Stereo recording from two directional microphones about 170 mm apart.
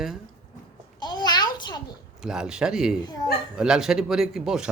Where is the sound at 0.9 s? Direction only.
25° left (ahead or behind).